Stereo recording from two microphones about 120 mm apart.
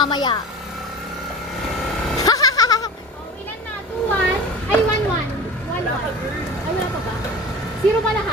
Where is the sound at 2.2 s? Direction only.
30° left (ahead or behind).